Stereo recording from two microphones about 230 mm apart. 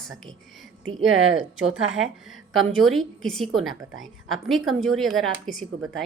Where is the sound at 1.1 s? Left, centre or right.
Right.